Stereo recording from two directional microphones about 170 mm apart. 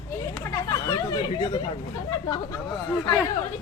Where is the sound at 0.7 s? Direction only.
20° left (ahead or behind).